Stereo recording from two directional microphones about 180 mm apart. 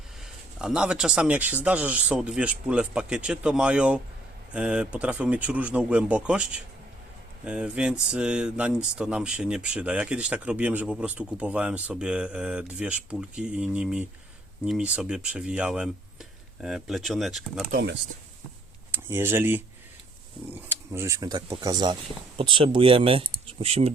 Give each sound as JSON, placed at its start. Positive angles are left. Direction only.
{"t": 0.6, "sound": "speech", "side_deg": -5}
{"t": 17.7, "sound": "speech", "side_deg": -65}
{"t": 18.9, "sound": "speech", "side_deg": -15}